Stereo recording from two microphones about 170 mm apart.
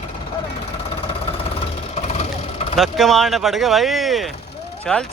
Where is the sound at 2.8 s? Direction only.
Centre (ahead or behind).